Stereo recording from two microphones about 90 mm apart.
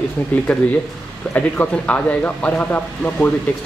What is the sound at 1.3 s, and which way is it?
Speech, 15° left (ahead or behind).